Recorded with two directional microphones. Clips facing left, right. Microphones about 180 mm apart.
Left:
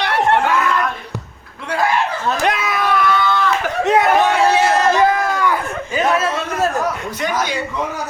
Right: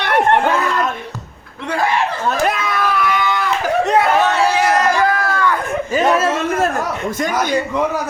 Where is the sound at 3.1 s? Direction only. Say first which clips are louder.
Left 2 dB; 15° right (ahead or behind).